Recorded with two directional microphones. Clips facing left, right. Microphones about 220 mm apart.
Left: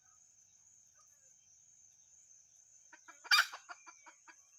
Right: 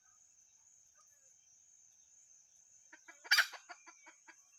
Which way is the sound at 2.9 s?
15° right (ahead or behind).